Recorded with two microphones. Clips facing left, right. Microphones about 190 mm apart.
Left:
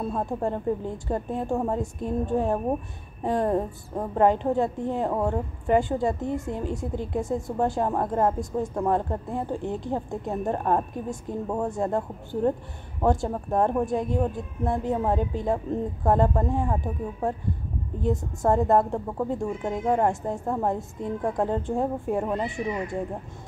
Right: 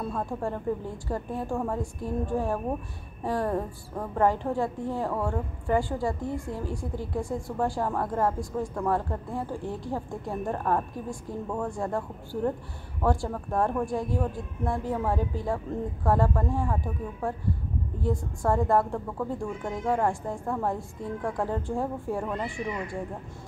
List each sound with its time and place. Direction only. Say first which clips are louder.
0.0 s a woman's voice: left 3 dB; 25° left (ahead or behind)